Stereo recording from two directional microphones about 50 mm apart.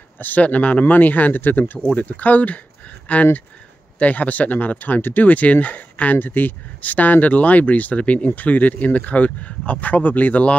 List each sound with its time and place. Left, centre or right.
0.2 s speech: left